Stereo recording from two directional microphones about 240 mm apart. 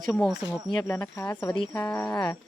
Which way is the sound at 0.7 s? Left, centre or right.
Centre.